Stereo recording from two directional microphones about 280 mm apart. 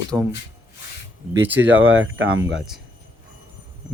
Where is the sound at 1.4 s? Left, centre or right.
Centre.